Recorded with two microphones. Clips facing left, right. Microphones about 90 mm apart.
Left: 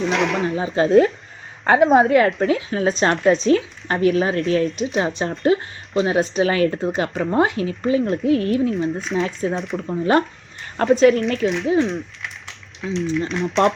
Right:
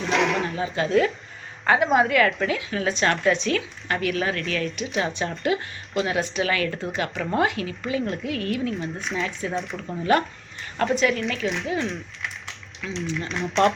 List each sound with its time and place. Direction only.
0.0 s speech: centre (ahead or behind)
0.6 s speech: 35° left (ahead or behind)
8.7 s speech: centre (ahead or behind)
9.4 s speech: 35° left (ahead or behind)
11.4 s speech: centre (ahead or behind)
11.8 s a sound: centre (ahead or behind)
12.9 s speech: centre (ahead or behind)